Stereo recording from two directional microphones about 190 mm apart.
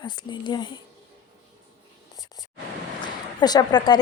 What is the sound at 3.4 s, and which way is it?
Speech, 20° left (ahead or behind).